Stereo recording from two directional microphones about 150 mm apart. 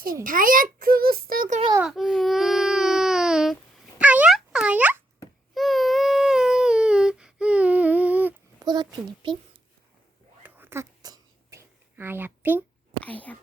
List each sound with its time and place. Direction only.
0.0 s a child's voice: 70° right (ahead or behind)
1.8 s baby cry: centre (ahead or behind)
4.0 s a sound: 10° right (ahead or behind)
5.5 s baby cry: centre (ahead or behind)
8.5 s a child's voice: 30° right (ahead or behind)
10.4 s a sound: 15° right (ahead or behind)
11.9 s speech: 15° right (ahead or behind)
13.0 s speech: 10° left (ahead or behind)